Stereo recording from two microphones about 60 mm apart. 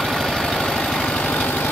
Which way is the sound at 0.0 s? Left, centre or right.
Centre.